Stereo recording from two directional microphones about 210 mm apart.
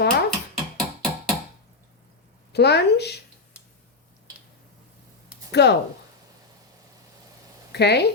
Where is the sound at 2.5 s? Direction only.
50° left (ahead or behind).